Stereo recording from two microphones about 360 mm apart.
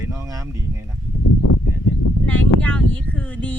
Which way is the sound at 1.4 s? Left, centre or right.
Left.